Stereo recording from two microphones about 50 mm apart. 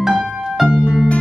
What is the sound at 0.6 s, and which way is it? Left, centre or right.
Music, centre.